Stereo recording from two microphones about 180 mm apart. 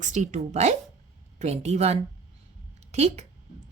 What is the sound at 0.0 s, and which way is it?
Speech, 45° right (ahead or behind).